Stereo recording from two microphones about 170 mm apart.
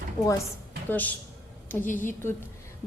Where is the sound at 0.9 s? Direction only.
10° left (ahead or behind).